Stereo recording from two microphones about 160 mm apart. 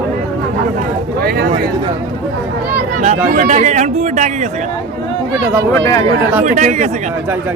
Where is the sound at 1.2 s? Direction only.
75° right (ahead or behind).